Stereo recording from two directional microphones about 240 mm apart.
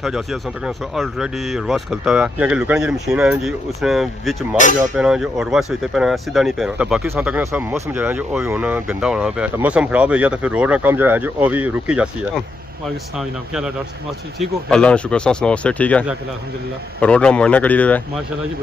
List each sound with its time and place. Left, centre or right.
0.0 s speech: centre
4.6 s speech: left
4.9 s speech: centre